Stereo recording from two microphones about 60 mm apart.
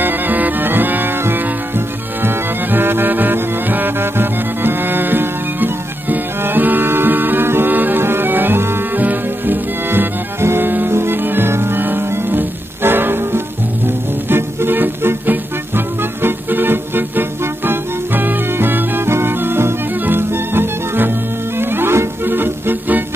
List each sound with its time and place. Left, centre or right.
0.0 s music: right